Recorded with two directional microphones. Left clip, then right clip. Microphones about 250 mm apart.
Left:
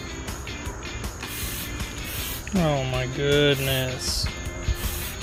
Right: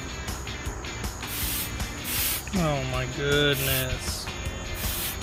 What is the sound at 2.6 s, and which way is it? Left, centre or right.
Music, centre.